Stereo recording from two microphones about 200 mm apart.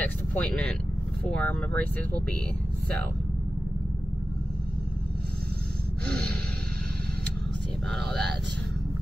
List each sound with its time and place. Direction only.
0.0 s vehicle: 10° left (ahead or behind)
1.3 s speech: 5° left (ahead or behind)
7.9 s speech: centre (ahead or behind)